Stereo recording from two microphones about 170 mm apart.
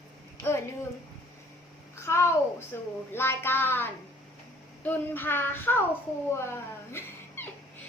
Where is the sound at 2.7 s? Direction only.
15° left (ahead or behind).